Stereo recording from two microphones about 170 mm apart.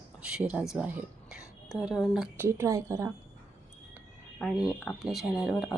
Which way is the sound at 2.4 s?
15° right (ahead or behind).